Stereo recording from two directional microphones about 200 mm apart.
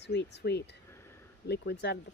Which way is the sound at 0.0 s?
60° left (ahead or behind).